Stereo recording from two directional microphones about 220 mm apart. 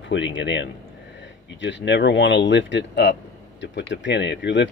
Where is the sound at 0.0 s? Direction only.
55° left (ahead or behind).